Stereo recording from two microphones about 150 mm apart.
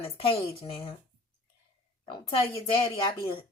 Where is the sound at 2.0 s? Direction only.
35° left (ahead or behind).